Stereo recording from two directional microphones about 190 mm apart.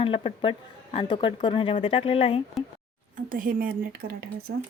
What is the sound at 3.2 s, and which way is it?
Speech, 45° right (ahead or behind).